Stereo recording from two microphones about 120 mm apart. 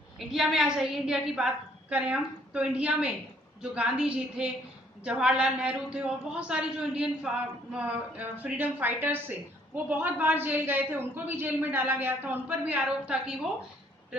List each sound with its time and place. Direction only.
0.2 s a woman's voice: 5° right (ahead or behind)